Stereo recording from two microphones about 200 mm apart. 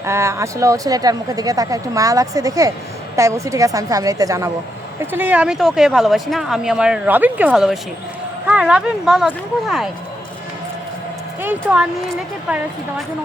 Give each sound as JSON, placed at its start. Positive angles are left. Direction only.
{"t": 0.0, "sound": "speech", "side_deg": -15}
{"t": 12.5, "sound": "speech", "side_deg": -5}